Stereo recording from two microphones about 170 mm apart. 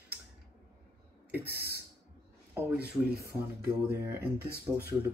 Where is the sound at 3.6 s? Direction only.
15° right (ahead or behind).